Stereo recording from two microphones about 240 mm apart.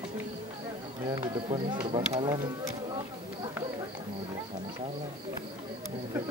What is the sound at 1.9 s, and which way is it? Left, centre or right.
Speech, right.